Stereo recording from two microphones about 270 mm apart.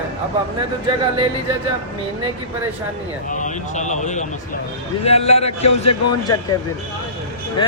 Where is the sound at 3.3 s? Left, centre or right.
Left.